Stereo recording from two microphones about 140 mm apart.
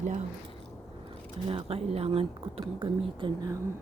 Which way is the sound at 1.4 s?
45° right (ahead or behind).